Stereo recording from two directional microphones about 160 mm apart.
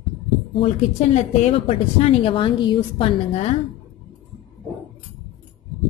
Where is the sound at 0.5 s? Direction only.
40° left (ahead or behind).